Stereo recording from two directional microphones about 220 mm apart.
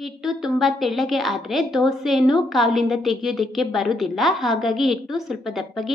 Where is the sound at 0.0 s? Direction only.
Centre (ahead or behind).